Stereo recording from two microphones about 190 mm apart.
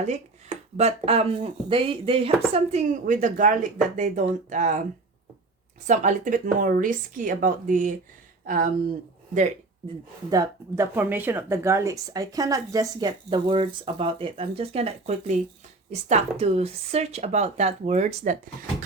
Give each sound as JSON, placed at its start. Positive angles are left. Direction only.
{"t": 0.0, "sound": "speech", "side_deg": -35}
{"t": 5.9, "sound": "speech", "side_deg": -40}
{"t": 10.2, "sound": "speech", "side_deg": -20}